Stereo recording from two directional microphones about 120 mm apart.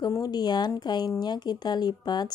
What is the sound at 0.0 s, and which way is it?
Speech, 35° left (ahead or behind).